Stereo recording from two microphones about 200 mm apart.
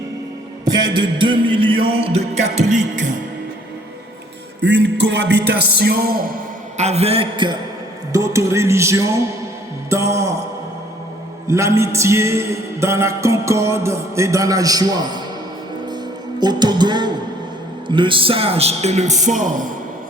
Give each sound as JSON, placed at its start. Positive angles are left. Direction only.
{"t": 0.6, "sound": "music", "side_deg": -20}
{"t": 4.6, "sound": "a man's voice", "side_deg": -55}
{"t": 5.5, "sound": "music", "side_deg": -55}
{"t": 6.7, "sound": "music", "side_deg": -35}
{"t": 8.1, "sound": "music", "side_deg": -15}
{"t": 11.4, "sound": "music", "side_deg": -15}
{"t": 16.4, "sound": "music", "side_deg": -20}
{"t": 17.8, "sound": "a man's voice", "side_deg": -25}